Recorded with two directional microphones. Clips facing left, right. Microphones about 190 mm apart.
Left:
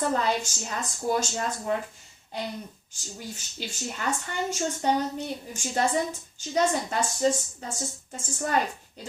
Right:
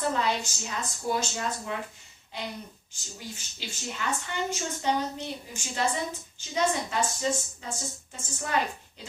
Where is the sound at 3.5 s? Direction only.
45° left (ahead or behind).